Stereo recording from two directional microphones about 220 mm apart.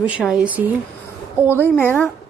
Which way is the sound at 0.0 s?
5° right (ahead or behind).